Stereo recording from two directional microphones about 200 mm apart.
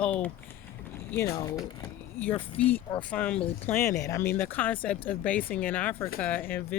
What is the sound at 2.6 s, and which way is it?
Speech, 5° left (ahead or behind).